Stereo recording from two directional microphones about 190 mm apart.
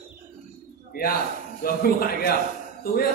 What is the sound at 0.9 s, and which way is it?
A man's voice, 50° left (ahead or behind).